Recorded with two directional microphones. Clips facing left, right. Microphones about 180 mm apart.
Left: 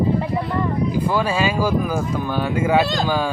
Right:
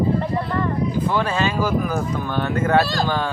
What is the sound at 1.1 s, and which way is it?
Speech, 10° left (ahead or behind).